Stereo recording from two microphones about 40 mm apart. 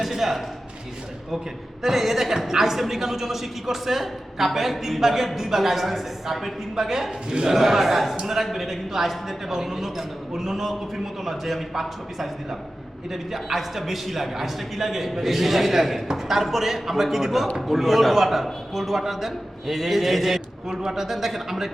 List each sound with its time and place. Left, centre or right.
0.0 s a woman's voice: centre
1.8 s a woman's voice: centre
7.3 s a man's voice: centre
7.5 s a man's voice: centre